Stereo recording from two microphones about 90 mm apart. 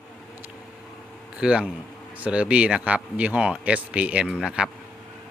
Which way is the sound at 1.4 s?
10° right (ahead or behind).